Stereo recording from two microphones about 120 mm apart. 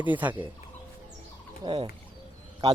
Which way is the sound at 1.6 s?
35° right (ahead or behind).